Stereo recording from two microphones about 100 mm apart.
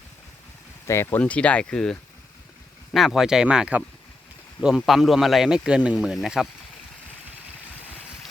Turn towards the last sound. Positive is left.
turn(degrees=-5)  # may be behind; listen again after turning